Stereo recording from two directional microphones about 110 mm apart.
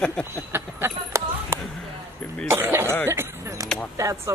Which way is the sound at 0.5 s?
20° right (ahead or behind).